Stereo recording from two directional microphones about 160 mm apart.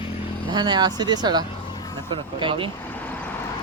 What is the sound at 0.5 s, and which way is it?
Speech, 25° right (ahead or behind).